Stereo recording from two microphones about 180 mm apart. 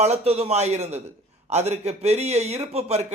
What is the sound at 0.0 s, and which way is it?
A man's voice, 35° right (ahead or behind).